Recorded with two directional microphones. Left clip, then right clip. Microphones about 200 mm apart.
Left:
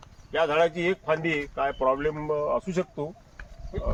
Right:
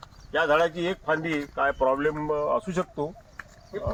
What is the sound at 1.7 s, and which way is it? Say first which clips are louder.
Speech: right 1 dB; 10° left (ahead or behind).